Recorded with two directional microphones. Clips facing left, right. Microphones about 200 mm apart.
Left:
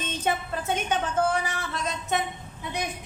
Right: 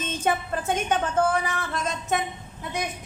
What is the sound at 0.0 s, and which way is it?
A woman's voice, 50° right (ahead or behind).